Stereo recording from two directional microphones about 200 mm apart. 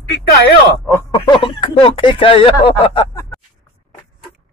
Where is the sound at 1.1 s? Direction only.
25° left (ahead or behind).